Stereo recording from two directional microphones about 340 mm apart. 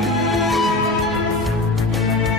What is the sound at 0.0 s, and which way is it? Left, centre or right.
Music, centre.